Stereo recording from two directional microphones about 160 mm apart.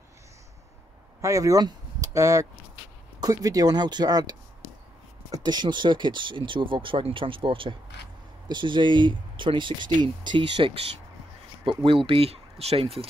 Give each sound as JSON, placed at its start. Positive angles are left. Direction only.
{"t": 1.2, "sound": "speech", "side_deg": -20}
{"t": 11.8, "sound": "speech", "side_deg": -35}